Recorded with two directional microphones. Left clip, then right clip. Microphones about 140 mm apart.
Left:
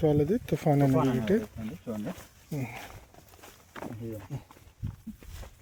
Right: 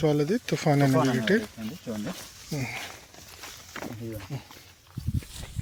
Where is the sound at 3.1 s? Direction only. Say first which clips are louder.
Right 8 dB; 55° left (ahead or behind).